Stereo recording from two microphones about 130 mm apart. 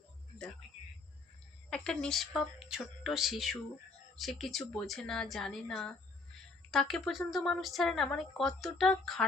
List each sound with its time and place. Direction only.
1.7 s speech: 5° left (ahead or behind)